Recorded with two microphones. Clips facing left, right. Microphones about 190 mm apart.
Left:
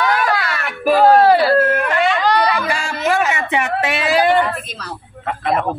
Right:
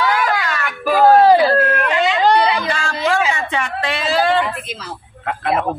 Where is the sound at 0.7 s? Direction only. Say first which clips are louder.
Left 3 dB; centre (ahead or behind).